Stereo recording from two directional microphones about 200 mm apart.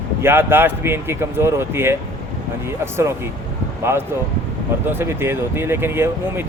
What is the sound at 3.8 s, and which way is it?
Speech, 10° right (ahead or behind).